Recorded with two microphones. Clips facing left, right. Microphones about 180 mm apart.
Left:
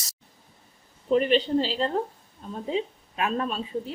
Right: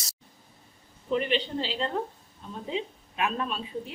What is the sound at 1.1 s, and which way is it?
A woman's voice, 40° left (ahead or behind).